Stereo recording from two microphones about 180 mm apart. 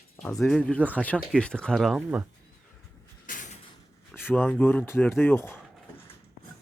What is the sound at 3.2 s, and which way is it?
Door, 45° left (ahead or behind).